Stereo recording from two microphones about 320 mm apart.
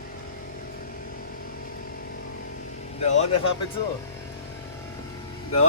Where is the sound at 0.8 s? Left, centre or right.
Left.